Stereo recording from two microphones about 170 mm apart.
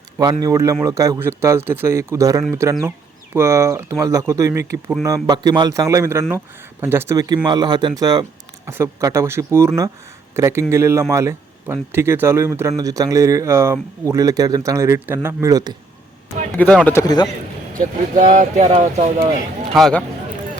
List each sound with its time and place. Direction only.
0.2 s speech: 25° right (ahead or behind)
16.6 s speech: 10° left (ahead or behind)
17.7 s speech: 50° right (ahead or behind)
19.7 s speech: 5° left (ahead or behind)